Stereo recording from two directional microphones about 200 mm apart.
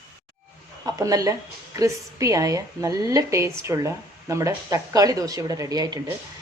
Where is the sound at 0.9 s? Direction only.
15° right (ahead or behind).